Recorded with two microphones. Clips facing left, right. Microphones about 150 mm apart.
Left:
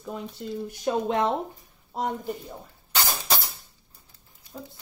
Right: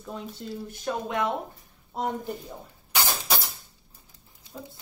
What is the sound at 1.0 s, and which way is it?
Speech, 30° left (ahead or behind).